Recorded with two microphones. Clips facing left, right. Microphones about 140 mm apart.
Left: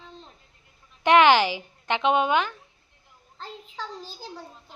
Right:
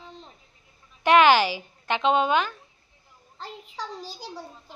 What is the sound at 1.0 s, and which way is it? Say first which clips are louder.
Speech: even; 15° left (ahead or behind).